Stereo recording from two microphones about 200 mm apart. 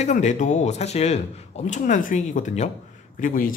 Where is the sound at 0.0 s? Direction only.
35° left (ahead or behind).